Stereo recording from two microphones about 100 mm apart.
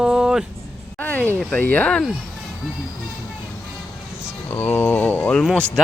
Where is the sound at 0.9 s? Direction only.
15° left (ahead or behind).